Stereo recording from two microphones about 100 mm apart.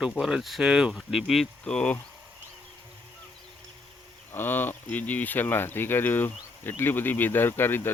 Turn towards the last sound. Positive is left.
turn(degrees=20)  # may be behind; listen again after turning